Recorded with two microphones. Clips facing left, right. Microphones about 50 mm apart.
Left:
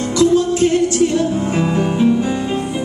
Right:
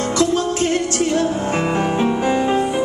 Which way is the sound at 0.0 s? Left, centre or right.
Right.